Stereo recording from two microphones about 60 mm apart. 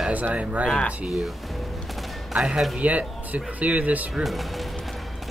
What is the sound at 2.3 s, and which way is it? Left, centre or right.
Speech, centre.